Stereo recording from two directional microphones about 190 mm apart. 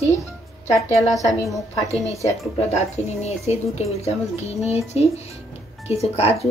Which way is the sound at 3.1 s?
35° left (ahead or behind).